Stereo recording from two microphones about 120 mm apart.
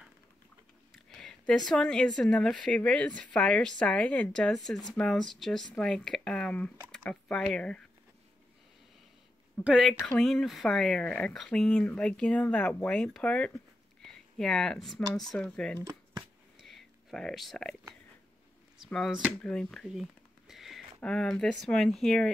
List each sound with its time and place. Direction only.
1.1 s a sound: 5° left (ahead or behind)
1.7 s a woman's voice: 5° left (ahead or behind)
9.6 s a woman's voice: 10° right (ahead or behind)
9.8 s speech: 5° left (ahead or behind)
15.8 s a sound: 35° right (ahead or behind)
16.6 s whispering: centre (ahead or behind)
18.9 s speech: 5° left (ahead or behind)
19.4 s a sound: 5° left (ahead or behind)
21.0 s speech: 5° left (ahead or behind)